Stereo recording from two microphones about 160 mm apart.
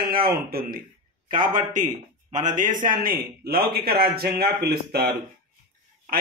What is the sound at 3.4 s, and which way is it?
A man's voice, 75° right (ahead or behind).